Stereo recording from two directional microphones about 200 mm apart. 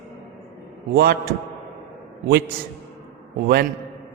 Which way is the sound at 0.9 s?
50° right (ahead or behind).